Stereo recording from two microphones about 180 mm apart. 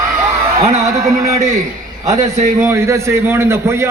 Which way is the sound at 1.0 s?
40° right (ahead or behind).